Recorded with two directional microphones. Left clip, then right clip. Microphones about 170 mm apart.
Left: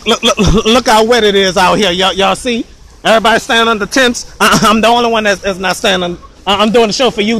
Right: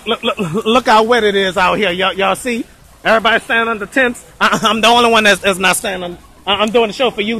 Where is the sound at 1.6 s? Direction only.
30° left (ahead or behind).